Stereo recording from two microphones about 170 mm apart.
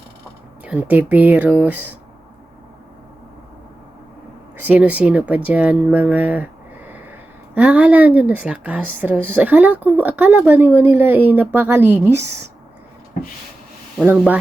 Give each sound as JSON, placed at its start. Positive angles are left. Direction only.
{"t": 0.6, "sound": "a woman's voice", "side_deg": -10}
{"t": 4.6, "sound": "a woman's voice", "side_deg": -10}